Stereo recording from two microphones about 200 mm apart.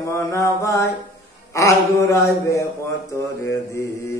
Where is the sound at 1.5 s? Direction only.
15° left (ahead or behind).